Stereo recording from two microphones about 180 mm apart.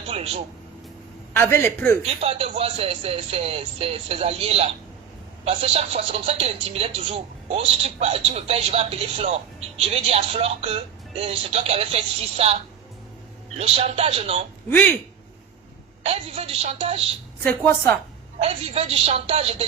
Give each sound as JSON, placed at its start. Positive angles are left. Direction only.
{"t": 0.1, "sound": "speech", "side_deg": -35}
{"t": 1.3, "sound": "speech", "side_deg": 10}
{"t": 2.2, "sound": "speech", "side_deg": -35}
{"t": 13.6, "sound": "speech", "side_deg": -35}
{"t": 14.7, "sound": "speech", "side_deg": 10}
{"t": 16.0, "sound": "speech", "side_deg": -35}
{"t": 17.4, "sound": "speech", "side_deg": 10}
{"t": 18.3, "sound": "speech", "side_deg": -35}